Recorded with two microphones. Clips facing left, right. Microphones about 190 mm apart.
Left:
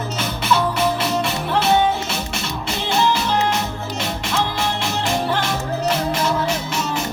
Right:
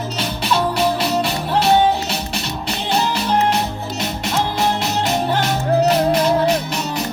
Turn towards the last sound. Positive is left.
turn(degrees=-35)  # may be behind; listen again after turning